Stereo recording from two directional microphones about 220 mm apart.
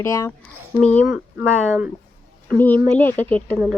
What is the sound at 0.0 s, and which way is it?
Speech, 15° left (ahead or behind).